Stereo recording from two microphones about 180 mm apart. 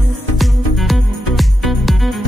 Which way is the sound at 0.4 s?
Centre (ahead or behind).